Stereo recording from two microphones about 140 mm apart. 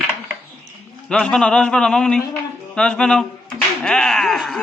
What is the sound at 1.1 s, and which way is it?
A man's voice, 5° left (ahead or behind).